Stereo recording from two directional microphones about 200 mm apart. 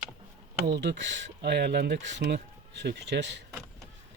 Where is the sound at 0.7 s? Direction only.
60° right (ahead or behind).